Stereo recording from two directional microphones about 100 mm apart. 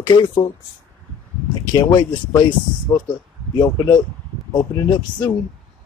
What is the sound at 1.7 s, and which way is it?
Speech, 35° left (ahead or behind).